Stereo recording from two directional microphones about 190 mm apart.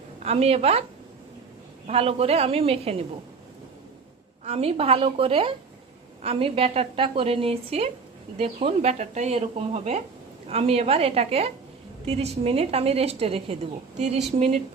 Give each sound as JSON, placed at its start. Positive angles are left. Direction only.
{"t": 0.2, "sound": "speech", "side_deg": -35}
{"t": 1.9, "sound": "speech", "side_deg": -30}
{"t": 4.4, "sound": "a woman's voice", "side_deg": -30}